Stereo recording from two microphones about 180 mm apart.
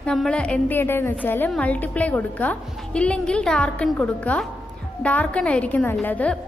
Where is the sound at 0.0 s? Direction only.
5° left (ahead or behind).